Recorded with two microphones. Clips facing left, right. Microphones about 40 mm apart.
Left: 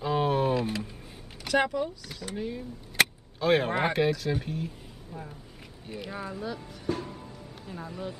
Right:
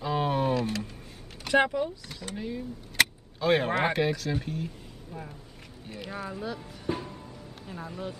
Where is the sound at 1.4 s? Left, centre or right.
Centre.